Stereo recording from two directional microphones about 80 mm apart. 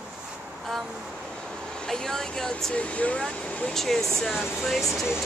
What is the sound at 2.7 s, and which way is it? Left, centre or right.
Speech, centre.